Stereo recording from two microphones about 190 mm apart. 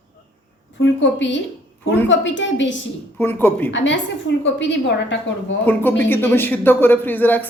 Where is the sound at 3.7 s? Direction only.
75° left (ahead or behind).